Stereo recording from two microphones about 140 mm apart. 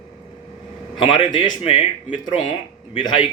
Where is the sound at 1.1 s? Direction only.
35° left (ahead or behind).